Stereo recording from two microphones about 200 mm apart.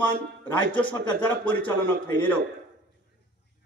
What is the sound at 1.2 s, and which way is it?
A man's voice, 10° left (ahead or behind).